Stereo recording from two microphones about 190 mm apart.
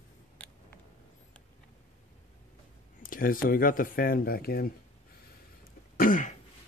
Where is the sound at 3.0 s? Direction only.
45° left (ahead or behind).